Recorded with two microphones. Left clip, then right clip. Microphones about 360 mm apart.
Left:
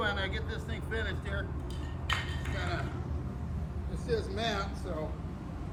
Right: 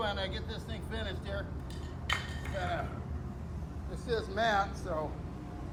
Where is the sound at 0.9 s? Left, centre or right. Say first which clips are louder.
Left 3 dB; centre.